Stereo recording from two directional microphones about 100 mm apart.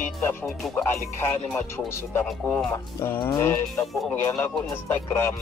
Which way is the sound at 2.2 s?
10° left (ahead or behind).